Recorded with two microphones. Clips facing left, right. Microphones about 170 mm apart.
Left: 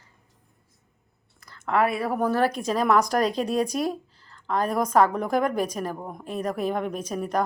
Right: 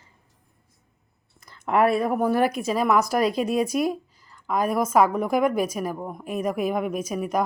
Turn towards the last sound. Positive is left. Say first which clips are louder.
# right 2 dB
turn(degrees=-10)  # may be behind; listen again after turning